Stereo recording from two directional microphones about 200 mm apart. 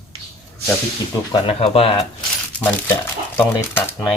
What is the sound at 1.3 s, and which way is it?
Speech, 30° left (ahead or behind).